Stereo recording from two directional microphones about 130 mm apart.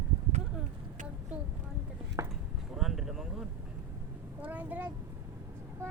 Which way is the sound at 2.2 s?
25° right (ahead or behind).